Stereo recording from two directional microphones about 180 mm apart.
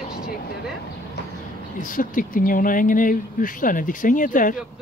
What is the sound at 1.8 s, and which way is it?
Speech, 50° left (ahead or behind).